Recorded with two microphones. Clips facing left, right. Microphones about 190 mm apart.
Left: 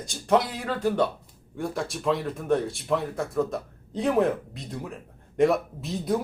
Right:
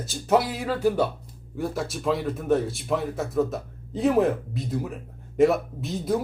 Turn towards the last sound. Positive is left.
turn(degrees=0)  # may be behind; listen again after turning